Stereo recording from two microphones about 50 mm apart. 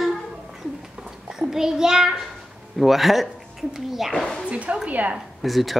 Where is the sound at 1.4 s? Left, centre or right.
Centre.